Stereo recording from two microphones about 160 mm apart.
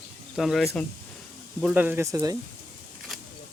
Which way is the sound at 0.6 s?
15° left (ahead or behind).